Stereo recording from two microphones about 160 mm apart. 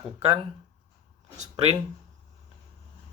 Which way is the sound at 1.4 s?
40° right (ahead or behind).